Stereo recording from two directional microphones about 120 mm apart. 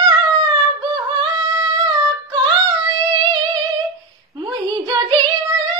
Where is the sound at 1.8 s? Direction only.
40° right (ahead or behind).